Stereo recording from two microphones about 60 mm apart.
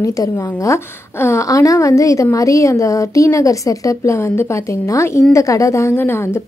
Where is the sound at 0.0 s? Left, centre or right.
Left.